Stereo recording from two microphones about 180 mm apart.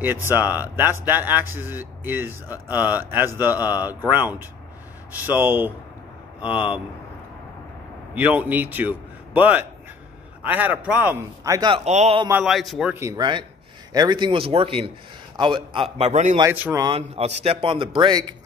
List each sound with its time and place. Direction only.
0.3 s a man's voice: 10° right (ahead or behind)
8.1 s a man's voice: 10° right (ahead or behind)
11.7 s a man's voice: 40° right (ahead or behind)
12.3 s a man's voice: 5° right (ahead or behind)
12.9 s a man's voice: 15° right (ahead or behind); by 16.3 s 40° right (ahead or behind)
16.5 s a man's voice: 10° right (ahead or behind)
16.8 s a man's voice: 30° right (ahead or behind)